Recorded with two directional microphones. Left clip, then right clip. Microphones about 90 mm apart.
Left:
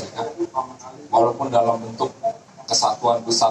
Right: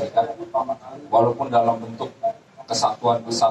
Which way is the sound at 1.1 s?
35° left (ahead or behind).